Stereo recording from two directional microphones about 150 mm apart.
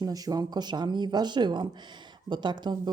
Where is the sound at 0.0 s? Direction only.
25° right (ahead or behind).